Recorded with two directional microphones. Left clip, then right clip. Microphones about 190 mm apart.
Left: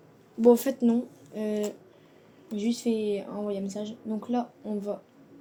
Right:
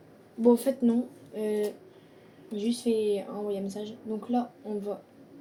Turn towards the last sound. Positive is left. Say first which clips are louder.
# even
turn(degrees=50)  # may be behind; listen again after turning